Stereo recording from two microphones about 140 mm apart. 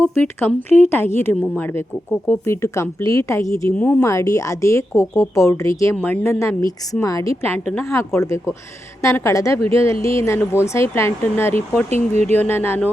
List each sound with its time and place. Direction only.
0.0 s a woman's voice: 15° left (ahead or behind)